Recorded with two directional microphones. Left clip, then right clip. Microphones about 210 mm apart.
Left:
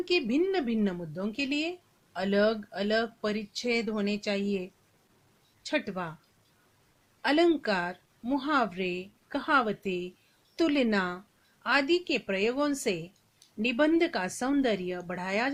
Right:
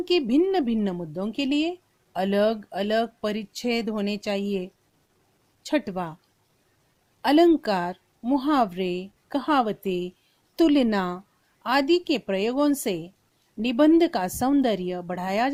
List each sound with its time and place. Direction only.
0.0 s a woman's voice: 50° right (ahead or behind)
7.2 s a woman's voice: 50° right (ahead or behind)